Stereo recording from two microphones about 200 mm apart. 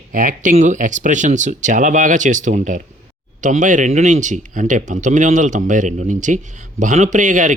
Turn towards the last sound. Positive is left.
turn(degrees=-40)  # may be behind; listen again after turning